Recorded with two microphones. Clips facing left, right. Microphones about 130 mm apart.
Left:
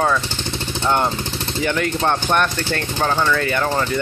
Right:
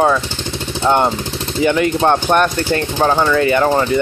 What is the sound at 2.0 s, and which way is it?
Speech, 35° right (ahead or behind).